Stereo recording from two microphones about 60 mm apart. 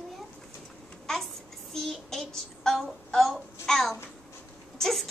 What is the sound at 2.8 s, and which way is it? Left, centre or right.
A woman's voice, centre.